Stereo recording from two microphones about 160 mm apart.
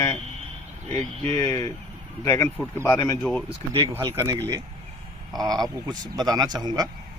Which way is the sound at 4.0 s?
20° right (ahead or behind).